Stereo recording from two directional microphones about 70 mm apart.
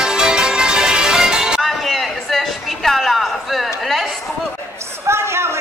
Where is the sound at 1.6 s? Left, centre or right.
Centre.